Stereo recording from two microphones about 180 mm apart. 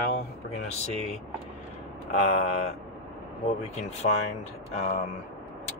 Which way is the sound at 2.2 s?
35° left (ahead or behind).